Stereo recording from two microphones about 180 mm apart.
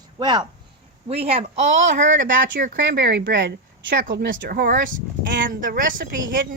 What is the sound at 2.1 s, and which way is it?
Speech, 90° right.